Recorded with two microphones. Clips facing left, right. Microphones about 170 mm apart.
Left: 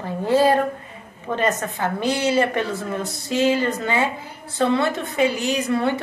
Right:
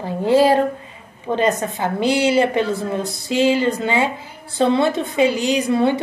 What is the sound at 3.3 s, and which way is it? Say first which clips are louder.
A woman's voice: right 3 dB; 25° right (ahead or behind).